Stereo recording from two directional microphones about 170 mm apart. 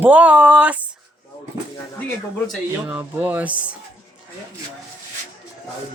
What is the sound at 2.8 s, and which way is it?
Speech, 10° right (ahead or behind).